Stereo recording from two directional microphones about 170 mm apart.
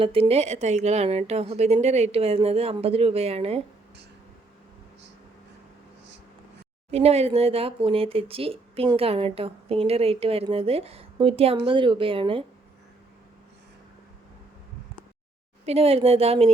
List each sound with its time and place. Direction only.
0.0 s a woman's voice: 35° right (ahead or behind)
6.9 s a woman's voice: 40° right (ahead or behind)
15.6 s a woman's voice: 35° right (ahead or behind)